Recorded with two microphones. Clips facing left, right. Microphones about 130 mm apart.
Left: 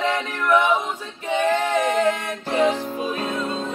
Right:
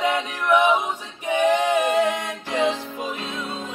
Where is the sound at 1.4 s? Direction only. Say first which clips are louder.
Right 2 dB; 15° right (ahead or behind).